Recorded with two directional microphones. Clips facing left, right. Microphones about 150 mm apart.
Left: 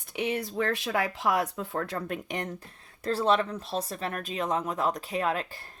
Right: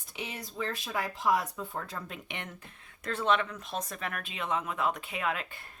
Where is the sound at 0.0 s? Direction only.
60° left (ahead or behind).